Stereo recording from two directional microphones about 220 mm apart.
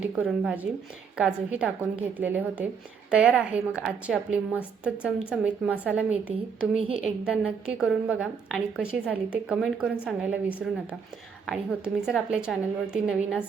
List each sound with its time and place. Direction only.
0.2 s a woman's voice: 5° right (ahead or behind)